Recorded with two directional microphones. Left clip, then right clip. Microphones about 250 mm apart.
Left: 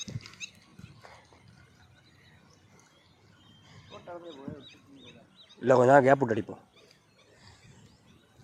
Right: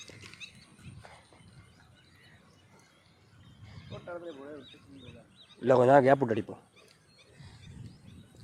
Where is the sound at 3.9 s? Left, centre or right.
Right.